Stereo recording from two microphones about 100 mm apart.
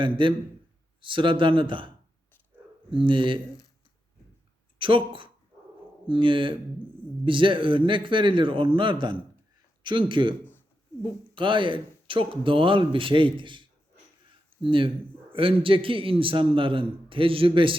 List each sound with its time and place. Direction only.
0.0 s a man's voice: 55° right (ahead or behind)
2.9 s a man's voice: 55° right (ahead or behind)
4.8 s a man's voice: 60° right (ahead or behind)
11.3 s a man's voice: 55° right (ahead or behind)